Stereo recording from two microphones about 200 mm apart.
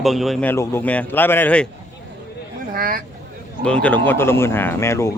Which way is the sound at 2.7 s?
45° right (ahead or behind).